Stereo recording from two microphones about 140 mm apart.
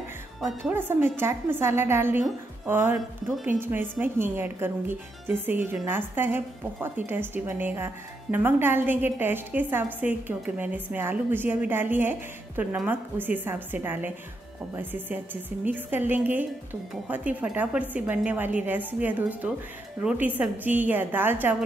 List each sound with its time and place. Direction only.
0.7 s a woman's voice: 15° right (ahead or behind)